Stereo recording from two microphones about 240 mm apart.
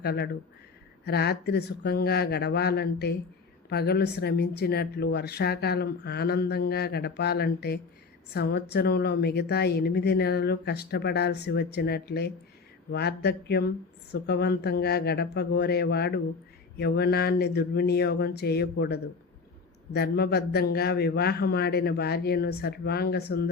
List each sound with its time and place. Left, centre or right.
0.0 s a woman's voice: left